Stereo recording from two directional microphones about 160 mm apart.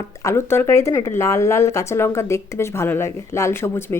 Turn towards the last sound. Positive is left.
turn(degrees=15)  # may be behind; listen again after turning